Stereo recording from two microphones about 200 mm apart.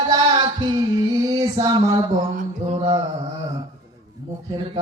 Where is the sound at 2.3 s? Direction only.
35° right (ahead or behind).